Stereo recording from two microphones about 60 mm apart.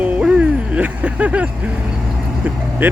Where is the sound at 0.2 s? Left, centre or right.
Centre.